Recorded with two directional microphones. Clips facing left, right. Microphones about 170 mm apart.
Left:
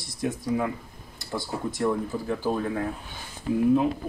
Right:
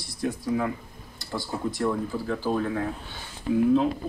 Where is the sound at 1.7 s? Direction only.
20° left (ahead or behind).